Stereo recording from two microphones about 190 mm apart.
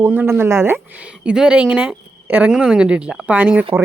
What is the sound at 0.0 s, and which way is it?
Speech, 10° right (ahead or behind).